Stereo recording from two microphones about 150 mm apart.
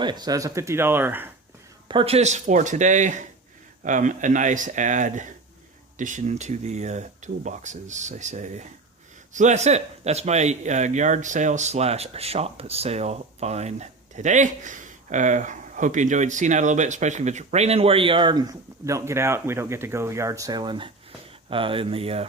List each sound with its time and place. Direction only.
0.0 s speech: 30° right (ahead or behind); by 1.3 s 15° right (ahead or behind)
1.9 s speech: 40° right (ahead or behind)